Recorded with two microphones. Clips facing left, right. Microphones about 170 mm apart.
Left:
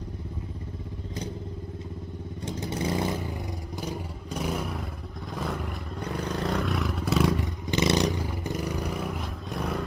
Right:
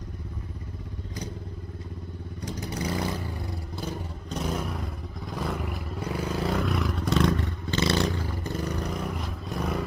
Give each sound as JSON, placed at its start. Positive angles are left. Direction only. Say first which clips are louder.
{"t": 2.4, "sound": "vehicle", "louder": "left 2 dB", "side_deg": 25}
{"t": 3.7, "sound": "vehicle", "louder": "left 1 dB", "side_deg": 15}